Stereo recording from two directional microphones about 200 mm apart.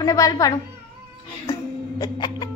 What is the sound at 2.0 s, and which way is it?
Music, 20° left (ahead or behind).